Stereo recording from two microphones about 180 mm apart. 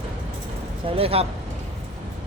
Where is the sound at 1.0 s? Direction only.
30° right (ahead or behind).